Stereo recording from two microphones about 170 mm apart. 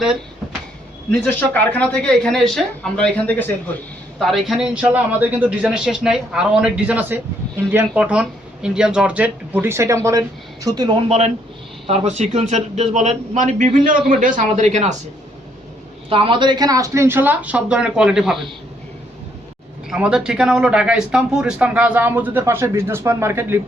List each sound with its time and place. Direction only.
1.2 s a man's voice: 10° left (ahead or behind); by 10.9 s 25° right (ahead or behind)
11.9 s speech: 40° right (ahead or behind)
16.0 s speech: 30° right (ahead or behind); by 18.5 s centre (ahead or behind)
19.9 s speech: 5° right (ahead or behind)